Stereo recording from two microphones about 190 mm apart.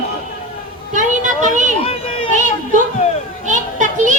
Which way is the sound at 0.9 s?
40° right (ahead or behind).